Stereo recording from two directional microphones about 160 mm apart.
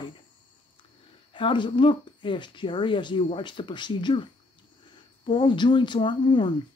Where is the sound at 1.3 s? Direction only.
30° left (ahead or behind).